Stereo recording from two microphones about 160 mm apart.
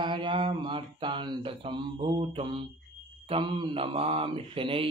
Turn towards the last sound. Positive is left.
turn(degrees=-35)  # may be behind; listen again after turning